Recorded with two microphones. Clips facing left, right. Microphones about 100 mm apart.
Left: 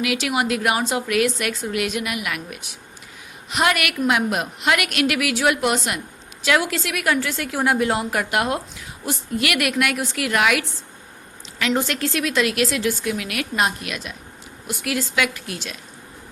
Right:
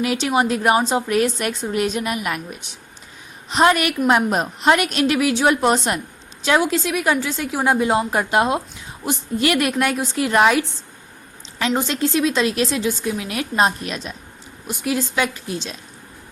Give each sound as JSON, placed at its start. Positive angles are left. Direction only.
{"t": 0.0, "sound": "a woman's voice", "side_deg": -30}
{"t": 11.7, "sound": "a woman's voice", "side_deg": -25}